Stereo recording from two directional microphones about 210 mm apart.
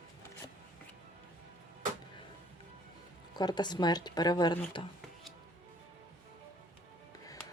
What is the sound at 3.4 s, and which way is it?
Speech, 20° left (ahead or behind).